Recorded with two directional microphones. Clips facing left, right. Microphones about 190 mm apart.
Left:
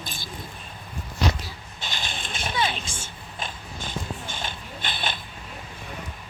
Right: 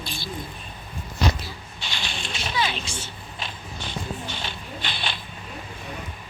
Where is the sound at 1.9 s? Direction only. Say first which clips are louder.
Even; 50° left (ahead or behind).